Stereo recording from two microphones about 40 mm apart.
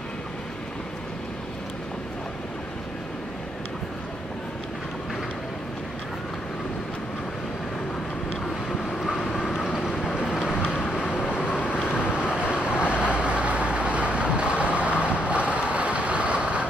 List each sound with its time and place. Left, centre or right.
9.3 s vehicle: centre
12.1 s vehicle: right